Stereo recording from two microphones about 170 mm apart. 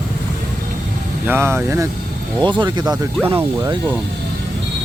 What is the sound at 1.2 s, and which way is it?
Speech, 15° right (ahead or behind).